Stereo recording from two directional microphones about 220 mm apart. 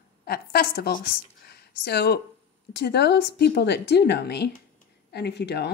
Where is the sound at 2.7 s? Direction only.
50° left (ahead or behind).